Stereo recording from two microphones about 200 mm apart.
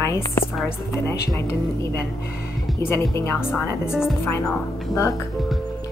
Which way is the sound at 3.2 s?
10° left (ahead or behind).